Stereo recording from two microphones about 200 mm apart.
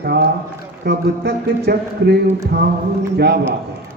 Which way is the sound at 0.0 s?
50° right (ahead or behind).